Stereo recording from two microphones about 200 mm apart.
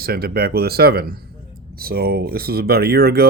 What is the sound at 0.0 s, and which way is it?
Speech, 50° right (ahead or behind).